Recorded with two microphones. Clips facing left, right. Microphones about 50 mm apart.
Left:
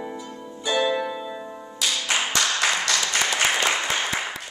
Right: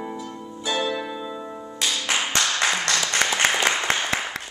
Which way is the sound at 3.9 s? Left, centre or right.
Right.